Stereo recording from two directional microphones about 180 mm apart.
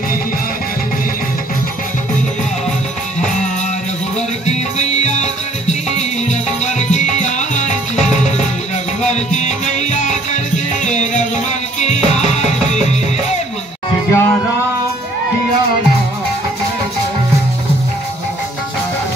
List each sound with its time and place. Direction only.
4.5 s music: 40° left (ahead or behind)
9.1 s music: 40° left (ahead or behind)
14.1 s music: 15° left (ahead or behind)